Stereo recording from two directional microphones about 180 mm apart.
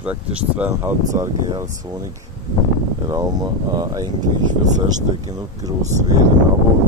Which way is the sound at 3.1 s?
20° right (ahead or behind).